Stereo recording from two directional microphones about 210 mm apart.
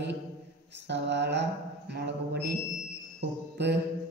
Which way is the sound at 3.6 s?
55° right (ahead or behind).